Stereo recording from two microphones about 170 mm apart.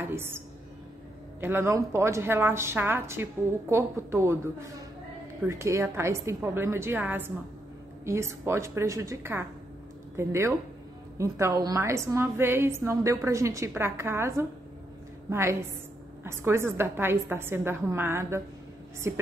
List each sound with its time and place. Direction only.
0.0 s a sound: 15° right (ahead or behind)
1.4 s a woman's voice: 15° right (ahead or behind)
5.5 s a woman's voice: 15° right (ahead or behind)